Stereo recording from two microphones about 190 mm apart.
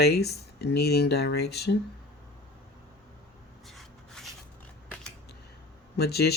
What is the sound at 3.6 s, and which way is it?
Rub, centre (ahead or behind).